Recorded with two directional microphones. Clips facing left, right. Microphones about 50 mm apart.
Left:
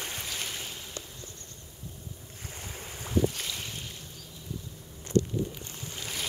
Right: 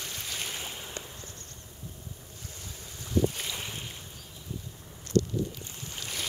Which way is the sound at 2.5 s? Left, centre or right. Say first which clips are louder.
Left 6 dB; left.